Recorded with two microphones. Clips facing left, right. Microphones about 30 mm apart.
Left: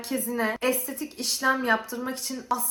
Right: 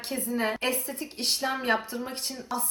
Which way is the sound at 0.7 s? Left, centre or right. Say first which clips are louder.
Left 2 dB; right.